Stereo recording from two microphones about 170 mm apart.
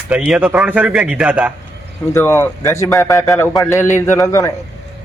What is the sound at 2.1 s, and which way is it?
A man's voice, 15° left (ahead or behind).